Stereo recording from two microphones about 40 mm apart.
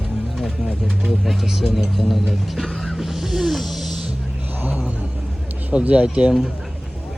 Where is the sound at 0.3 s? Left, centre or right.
Centre.